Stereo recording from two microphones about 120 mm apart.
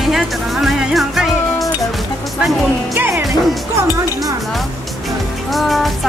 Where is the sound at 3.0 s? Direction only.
15° right (ahead or behind).